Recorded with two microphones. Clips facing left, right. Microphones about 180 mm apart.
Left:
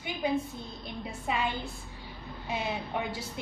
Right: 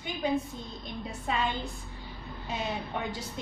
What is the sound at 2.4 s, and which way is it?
Speech, 10° left (ahead or behind).